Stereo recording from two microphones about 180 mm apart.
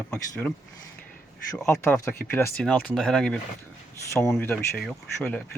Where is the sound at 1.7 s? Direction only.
15° left (ahead or behind).